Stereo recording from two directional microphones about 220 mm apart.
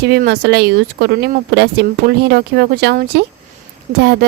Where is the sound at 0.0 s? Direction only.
45° right (ahead or behind).